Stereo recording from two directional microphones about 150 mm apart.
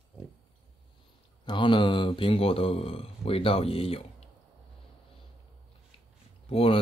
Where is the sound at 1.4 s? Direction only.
35° left (ahead or behind).